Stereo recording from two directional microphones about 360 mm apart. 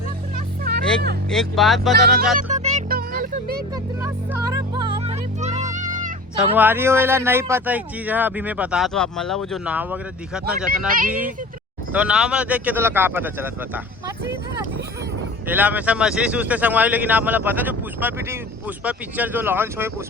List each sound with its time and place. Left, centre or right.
1.3 s speech: centre
2.3 s music: centre
4.0 s music: centre
6.3 s speech: centre
10.7 s speech: right
11.9 s speech: centre
15.4 s speech: centre